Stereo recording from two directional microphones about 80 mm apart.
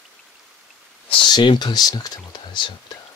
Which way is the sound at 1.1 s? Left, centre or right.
Left.